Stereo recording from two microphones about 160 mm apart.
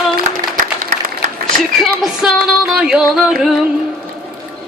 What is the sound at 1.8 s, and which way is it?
Speech, centre (ahead or behind).